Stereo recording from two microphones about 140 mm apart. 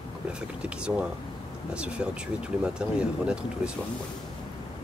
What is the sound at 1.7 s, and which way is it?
Speech, 5° right (ahead or behind).